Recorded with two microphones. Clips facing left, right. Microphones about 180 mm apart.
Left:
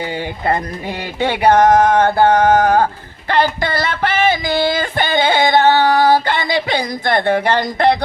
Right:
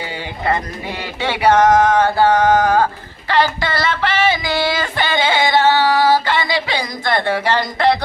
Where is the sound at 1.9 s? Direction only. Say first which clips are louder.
Left 2 dB; 55° left (ahead or behind).